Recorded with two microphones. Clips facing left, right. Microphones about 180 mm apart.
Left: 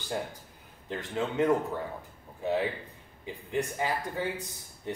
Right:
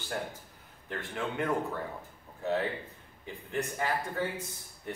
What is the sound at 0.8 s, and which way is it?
Speech, 20° left (ahead or behind).